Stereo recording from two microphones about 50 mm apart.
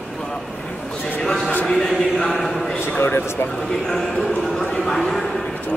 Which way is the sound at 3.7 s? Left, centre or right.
Centre.